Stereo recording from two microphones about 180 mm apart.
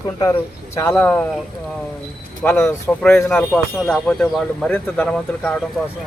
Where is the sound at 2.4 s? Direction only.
10° left (ahead or behind).